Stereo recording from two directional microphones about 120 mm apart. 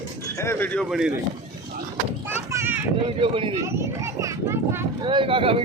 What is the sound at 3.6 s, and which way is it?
A child's voice, 20° right (ahead or behind).